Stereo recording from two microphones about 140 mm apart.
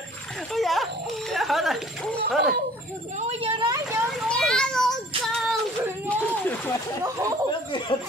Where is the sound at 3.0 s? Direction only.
50° right (ahead or behind).